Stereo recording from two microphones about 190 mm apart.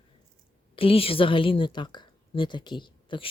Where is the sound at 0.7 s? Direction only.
30° left (ahead or behind).